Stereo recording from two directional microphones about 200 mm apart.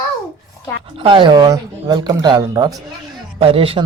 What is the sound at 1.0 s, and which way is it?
Speech, 25° right (ahead or behind).